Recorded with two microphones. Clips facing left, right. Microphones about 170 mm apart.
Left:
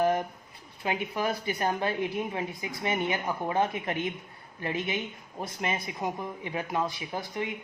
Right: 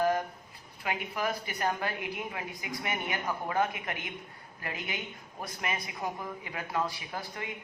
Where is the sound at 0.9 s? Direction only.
30° left (ahead or behind).